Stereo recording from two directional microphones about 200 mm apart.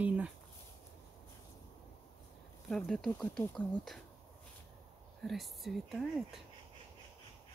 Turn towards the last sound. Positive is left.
turn(degrees=0)  # may be behind; listen again after turning